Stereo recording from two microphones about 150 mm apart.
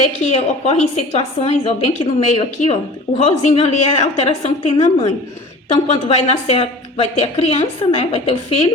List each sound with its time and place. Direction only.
0.3 s a woman's voice: 45° left (ahead or behind)